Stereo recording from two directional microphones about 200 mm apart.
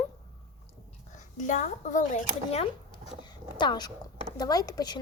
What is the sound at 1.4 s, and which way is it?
Speech, 40° left (ahead or behind).